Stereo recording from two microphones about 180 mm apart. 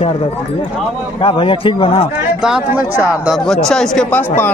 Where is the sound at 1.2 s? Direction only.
30° left (ahead or behind).